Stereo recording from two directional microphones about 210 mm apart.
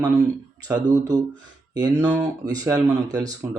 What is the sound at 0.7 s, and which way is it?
Speech, 20° right (ahead or behind).